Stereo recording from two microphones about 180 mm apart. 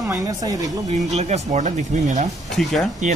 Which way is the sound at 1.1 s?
40° right (ahead or behind).